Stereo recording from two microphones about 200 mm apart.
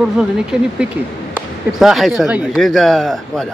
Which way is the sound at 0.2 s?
5° right (ahead or behind).